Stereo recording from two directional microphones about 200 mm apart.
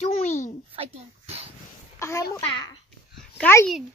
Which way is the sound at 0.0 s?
35° left (ahead or behind).